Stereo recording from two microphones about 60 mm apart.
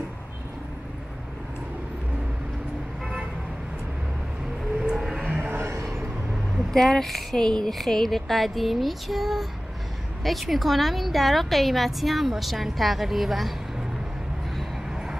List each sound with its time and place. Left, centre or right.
4.7 s vehicle: centre
5.4 s a sound: right
6.7 s a woman's voice: centre
14.9 s vehicle: centre